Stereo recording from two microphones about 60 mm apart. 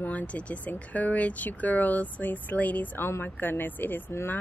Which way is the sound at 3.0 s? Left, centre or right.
Left.